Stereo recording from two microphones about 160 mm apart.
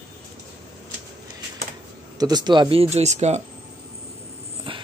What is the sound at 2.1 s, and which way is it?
Speech, 25° right (ahead or behind).